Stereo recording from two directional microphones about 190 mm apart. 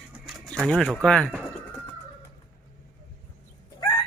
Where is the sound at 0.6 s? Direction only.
Centre (ahead or behind).